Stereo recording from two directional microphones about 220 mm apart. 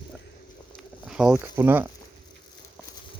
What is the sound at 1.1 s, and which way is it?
Speech, 5° right (ahead or behind).